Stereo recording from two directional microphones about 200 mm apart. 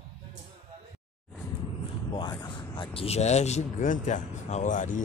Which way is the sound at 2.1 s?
20° left (ahead or behind).